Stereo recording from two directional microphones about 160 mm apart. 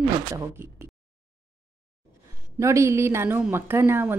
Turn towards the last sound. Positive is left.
turn(degrees=-15)  # may be behind; listen again after turning